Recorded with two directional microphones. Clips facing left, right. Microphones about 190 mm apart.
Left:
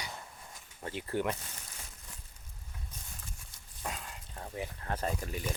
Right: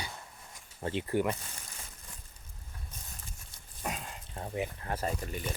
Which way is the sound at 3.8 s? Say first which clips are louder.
Right 3 dB; 20° right (ahead or behind).